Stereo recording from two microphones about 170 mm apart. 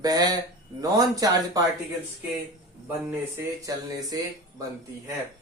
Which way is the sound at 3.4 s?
20° right (ahead or behind).